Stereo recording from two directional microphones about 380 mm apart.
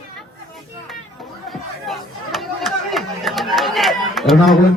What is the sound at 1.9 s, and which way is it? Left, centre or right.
Chatter, centre.